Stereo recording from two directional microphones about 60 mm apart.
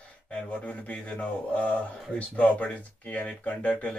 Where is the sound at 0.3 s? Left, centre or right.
Centre.